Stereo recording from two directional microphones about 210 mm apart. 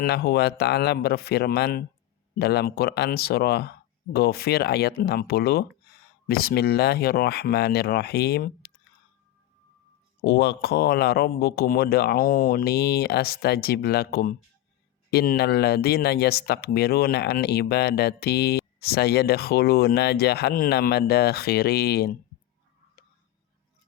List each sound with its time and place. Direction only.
0.0 s speech: 45° left (ahead or behind)
10.2 s speech: 50° left (ahead or behind)